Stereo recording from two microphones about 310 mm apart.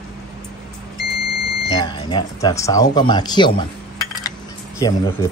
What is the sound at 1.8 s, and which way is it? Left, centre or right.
Speech, centre.